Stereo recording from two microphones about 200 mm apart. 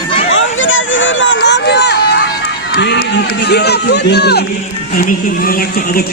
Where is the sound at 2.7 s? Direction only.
55° left (ahead or behind).